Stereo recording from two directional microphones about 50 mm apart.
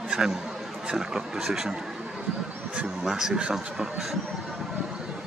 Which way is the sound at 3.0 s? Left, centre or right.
Centre.